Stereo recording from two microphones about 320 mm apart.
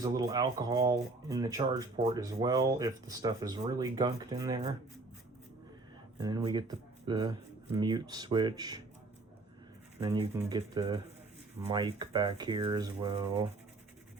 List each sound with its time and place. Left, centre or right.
0.0 s speech: centre
6.1 s speech: centre
10.0 s speech: centre